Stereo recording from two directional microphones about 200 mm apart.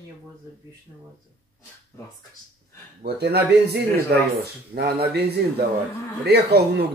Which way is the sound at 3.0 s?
55° right (ahead or behind).